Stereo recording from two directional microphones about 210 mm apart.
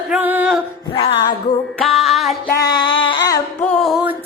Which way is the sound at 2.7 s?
20° left (ahead or behind).